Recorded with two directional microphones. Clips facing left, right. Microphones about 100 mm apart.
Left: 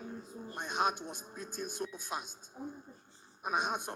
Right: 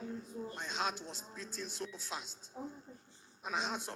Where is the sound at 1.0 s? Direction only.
15° left (ahead or behind).